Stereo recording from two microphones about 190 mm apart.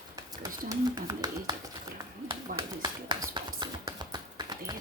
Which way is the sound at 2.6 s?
25° right (ahead or behind).